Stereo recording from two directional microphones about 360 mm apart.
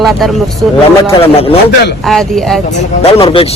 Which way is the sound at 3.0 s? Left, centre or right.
Centre.